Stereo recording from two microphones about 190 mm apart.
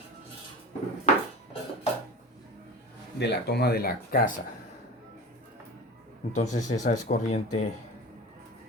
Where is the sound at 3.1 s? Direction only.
60° left (ahead or behind); by 4.4 s 45° left (ahead or behind).